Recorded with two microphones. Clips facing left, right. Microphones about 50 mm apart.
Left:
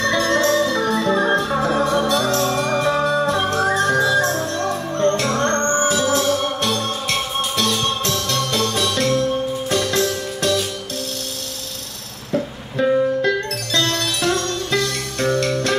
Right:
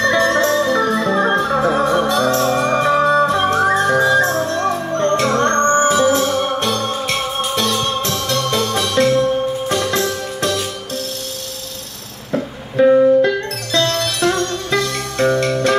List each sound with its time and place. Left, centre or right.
0.0 s music: centre
2.8 s music: right
4.5 s music: right
5.6 s music: right
12.3 s music: centre